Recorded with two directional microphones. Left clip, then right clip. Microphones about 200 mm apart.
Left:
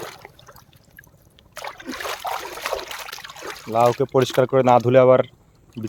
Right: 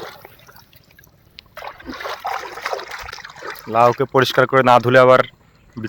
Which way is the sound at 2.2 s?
35° left (ahead or behind).